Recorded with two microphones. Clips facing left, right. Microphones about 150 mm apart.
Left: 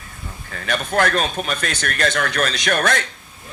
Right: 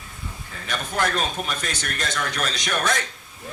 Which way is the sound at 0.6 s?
65° left (ahead or behind).